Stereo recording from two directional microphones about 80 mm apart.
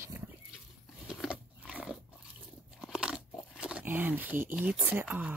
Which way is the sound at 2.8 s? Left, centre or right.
Centre.